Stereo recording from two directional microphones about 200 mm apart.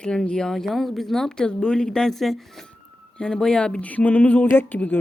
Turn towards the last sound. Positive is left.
turn(degrees=10)  # may be behind; listen again after turning